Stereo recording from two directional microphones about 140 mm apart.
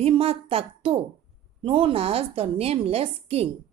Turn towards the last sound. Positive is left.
turn(degrees=-45)  # may be behind; listen again after turning